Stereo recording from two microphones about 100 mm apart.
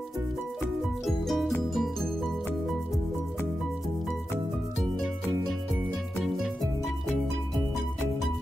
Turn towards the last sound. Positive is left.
turn(degrees=0)  # may be behind; listen again after turning